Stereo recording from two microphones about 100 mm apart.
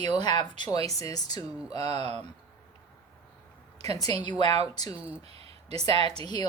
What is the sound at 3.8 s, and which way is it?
Speech, 40° left (ahead or behind).